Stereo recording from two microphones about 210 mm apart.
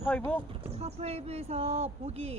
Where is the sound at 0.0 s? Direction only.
5° left (ahead or behind).